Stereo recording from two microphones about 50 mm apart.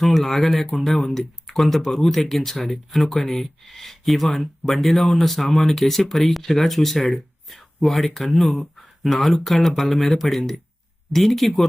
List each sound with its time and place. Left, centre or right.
0.0 s speech: centre